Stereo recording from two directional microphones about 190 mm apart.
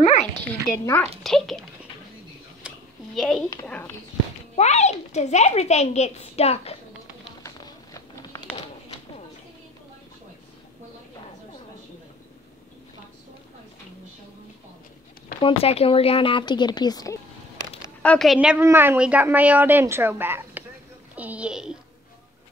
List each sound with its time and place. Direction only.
0.0 s a sound: 35° left (ahead or behind)
0.4 s speech: 10° left (ahead or behind)
1.2 s a child's voice: centre (ahead or behind)
2.6 s a sound: 5° right (ahead or behind)
3.2 s a child's voice: centre (ahead or behind)
4.6 s a woman's voice: 35° left (ahead or behind)
7.4 s a sound: 20° left (ahead or behind)
15.4 s a woman's voice: 30° left (ahead or behind)
18.0 s a woman's voice: 5° left (ahead or behind)